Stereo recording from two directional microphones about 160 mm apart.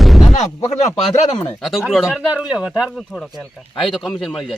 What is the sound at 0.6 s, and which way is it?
Speech, 40° left (ahead or behind).